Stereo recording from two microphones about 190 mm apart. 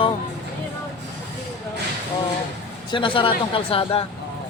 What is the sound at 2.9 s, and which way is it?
Speech, 25° left (ahead or behind).